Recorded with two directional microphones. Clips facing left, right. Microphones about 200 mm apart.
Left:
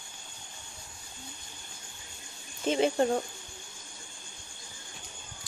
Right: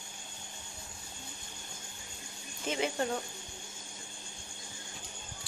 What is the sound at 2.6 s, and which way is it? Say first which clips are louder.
Speech: left 7 dB; 30° left (ahead or behind).